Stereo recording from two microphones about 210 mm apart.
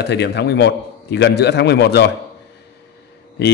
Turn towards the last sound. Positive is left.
turn(degrees=50)  # may be behind; listen again after turning